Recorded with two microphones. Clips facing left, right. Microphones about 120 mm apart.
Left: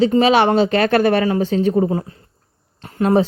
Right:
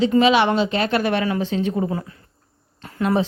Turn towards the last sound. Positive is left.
turn(degrees=30)  # may be behind; listen again after turning